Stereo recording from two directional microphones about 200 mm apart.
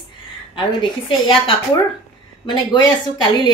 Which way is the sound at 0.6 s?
25° left (ahead or behind).